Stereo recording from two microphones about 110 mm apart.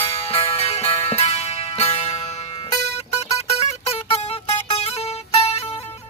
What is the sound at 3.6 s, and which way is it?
Music, 70° left (ahead or behind).